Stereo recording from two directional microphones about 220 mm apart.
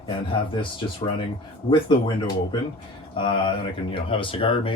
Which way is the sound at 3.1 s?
20° left (ahead or behind).